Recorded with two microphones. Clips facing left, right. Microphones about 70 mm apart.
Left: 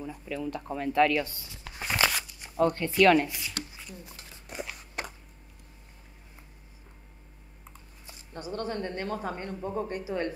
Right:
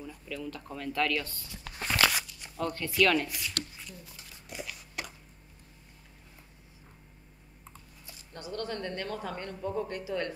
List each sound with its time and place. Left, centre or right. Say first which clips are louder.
0.0 s speech: left 5 dB; left
1.5 s a sound: even; centre
2.2 s speech: left 8 dB; left
4.3 s biting: left 3 dB; left
8.1 s speech: left 3 dB; left